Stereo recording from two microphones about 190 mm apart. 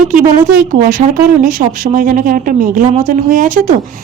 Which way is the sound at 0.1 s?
45° right (ahead or behind).